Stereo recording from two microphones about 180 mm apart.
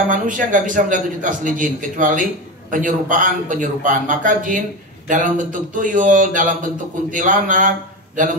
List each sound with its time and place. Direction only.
0.1 s a man's voice: 45° right (ahead or behind)